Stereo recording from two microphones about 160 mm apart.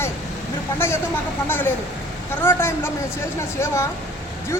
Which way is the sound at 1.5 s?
10° left (ahead or behind).